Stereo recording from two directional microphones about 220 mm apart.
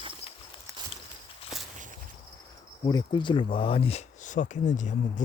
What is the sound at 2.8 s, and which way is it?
Speech, 20° left (ahead or behind).